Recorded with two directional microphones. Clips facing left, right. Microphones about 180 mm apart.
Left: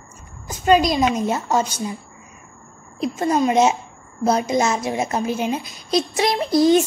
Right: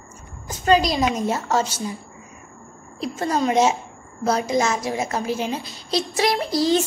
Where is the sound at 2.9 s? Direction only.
15° left (ahead or behind).